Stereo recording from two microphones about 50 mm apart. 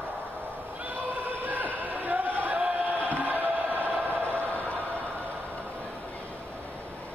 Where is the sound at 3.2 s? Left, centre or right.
Right.